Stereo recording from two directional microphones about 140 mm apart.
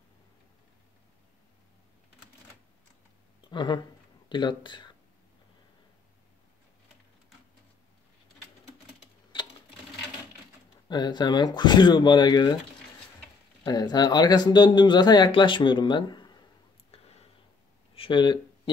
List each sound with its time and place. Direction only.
3.4 s speech: 35° left (ahead or behind)
10.9 s speech: 30° left (ahead or behind)
13.7 s speech: 30° left (ahead or behind)
16.9 s a sound: 45° left (ahead or behind)
17.9 s speech: 40° left (ahead or behind)